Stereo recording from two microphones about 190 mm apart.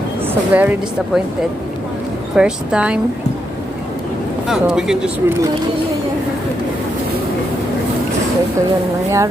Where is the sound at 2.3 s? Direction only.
5° right (ahead or behind).